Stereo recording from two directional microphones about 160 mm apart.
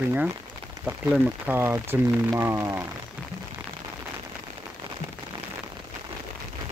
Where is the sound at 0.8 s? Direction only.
10° right (ahead or behind).